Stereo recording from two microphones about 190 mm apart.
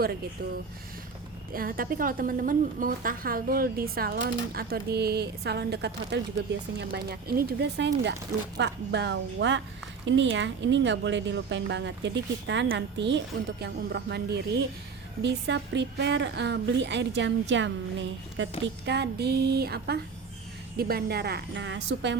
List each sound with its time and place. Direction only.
1.5 s a woman's voice: 50° right (ahead or behind); by 18.4 s 75° right (ahead or behind)
18.6 s speech: 65° right (ahead or behind)